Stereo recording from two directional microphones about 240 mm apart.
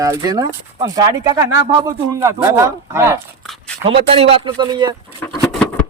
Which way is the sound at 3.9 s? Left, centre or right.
Right.